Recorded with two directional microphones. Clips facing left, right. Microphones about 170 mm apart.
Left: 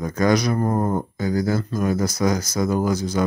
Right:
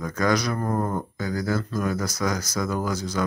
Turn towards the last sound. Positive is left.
turn(degrees=20)  # may be behind; listen again after turning